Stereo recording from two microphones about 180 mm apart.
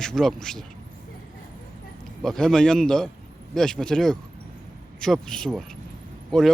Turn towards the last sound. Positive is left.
turn(degrees=0)  # may be behind; listen again after turning